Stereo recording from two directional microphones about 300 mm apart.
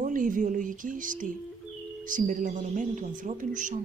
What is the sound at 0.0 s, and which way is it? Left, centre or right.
Speech, right.